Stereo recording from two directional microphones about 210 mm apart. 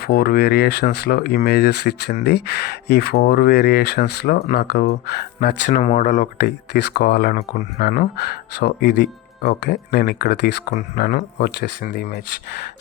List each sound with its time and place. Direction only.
0.0 s speech: 50° left (ahead or behind)
5.7 s speech: 35° left (ahead or behind)